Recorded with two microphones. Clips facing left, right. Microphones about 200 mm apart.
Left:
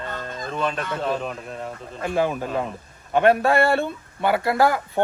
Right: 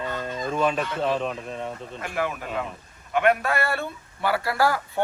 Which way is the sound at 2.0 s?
30° left (ahead or behind).